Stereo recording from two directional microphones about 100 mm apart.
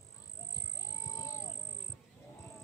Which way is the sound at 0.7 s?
30° left (ahead or behind).